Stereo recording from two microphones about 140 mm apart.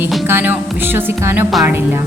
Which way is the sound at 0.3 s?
15° right (ahead or behind).